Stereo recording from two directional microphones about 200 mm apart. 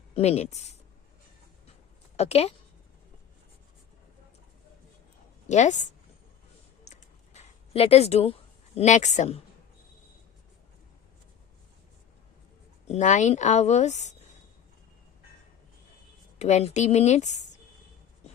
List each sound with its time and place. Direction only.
0.1 s speech: 30° left (ahead or behind)
2.1 s speech: 30° left (ahead or behind)
5.5 s speech: 35° left (ahead or behind)
6.8 s a sound: 35° left (ahead or behind)
12.9 s speech: 40° left (ahead or behind)
16.4 s speech: 35° left (ahead or behind)